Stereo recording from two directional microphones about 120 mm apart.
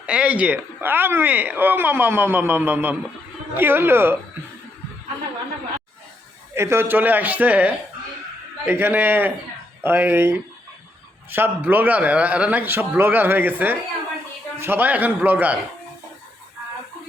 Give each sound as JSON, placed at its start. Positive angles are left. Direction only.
{"t": 0.0, "sound": "speech", "side_deg": -10}
{"t": 6.5, "sound": "speech", "side_deg": -20}